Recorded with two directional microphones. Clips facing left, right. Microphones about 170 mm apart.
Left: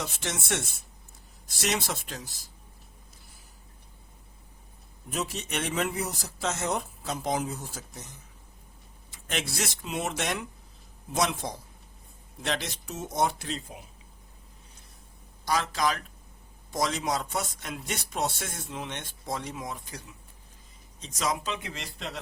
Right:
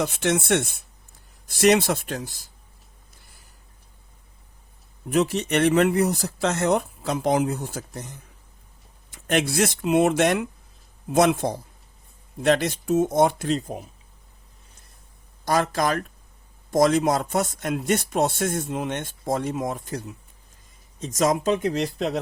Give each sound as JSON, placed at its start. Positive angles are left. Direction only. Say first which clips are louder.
{"t": 0.0, "sound": "speech", "louder": "right 12 dB", "side_deg": -60}
{"t": 5.0, "sound": "speech", "louder": "right 12 dB", "side_deg": -65}
{"t": 9.1, "sound": "speech", "louder": "right 11 dB", "side_deg": -60}
{"t": 15.4, "sound": "speech", "louder": "right 5 dB", "side_deg": -50}